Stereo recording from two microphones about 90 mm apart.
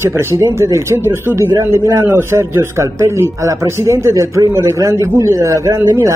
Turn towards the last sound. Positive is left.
turn(degrees=-35)  # may be behind; listen again after turning